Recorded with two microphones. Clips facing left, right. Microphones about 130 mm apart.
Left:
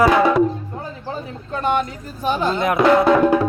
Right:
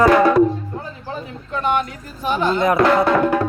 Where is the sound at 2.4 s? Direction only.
Centre (ahead or behind).